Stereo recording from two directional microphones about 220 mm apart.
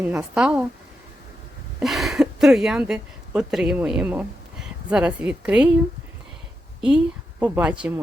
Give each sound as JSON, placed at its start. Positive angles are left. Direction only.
{"t": 0.0, "sound": "a woman's voice", "side_deg": -5}
{"t": 1.8, "sound": "a woman's voice", "side_deg": 0}
{"t": 6.8, "sound": "a woman's voice", "side_deg": -5}